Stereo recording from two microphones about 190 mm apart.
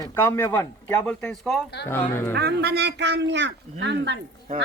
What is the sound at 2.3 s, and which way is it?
Speech, 60° right (ahead or behind).